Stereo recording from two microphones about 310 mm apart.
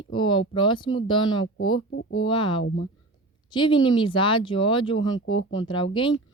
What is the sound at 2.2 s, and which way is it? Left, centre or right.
Speech, centre.